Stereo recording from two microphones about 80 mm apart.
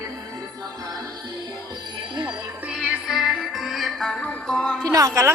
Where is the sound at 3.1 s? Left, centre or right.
Centre.